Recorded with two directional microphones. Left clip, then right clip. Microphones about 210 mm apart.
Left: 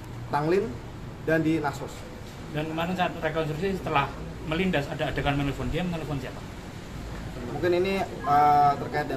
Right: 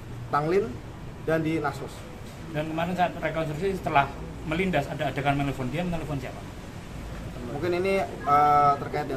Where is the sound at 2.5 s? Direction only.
50° right (ahead or behind).